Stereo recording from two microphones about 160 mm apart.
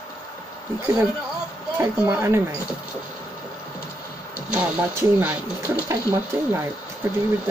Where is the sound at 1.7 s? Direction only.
15° right (ahead or behind).